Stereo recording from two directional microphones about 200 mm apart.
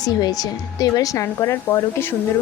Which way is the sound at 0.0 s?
20° left (ahead or behind).